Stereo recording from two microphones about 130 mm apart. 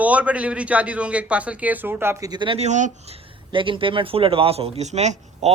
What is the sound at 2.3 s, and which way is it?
Speech, 35° right (ahead or behind).